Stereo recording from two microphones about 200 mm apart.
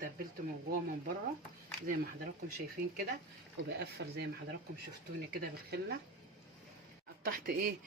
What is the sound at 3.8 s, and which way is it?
Speech, 55° right (ahead or behind).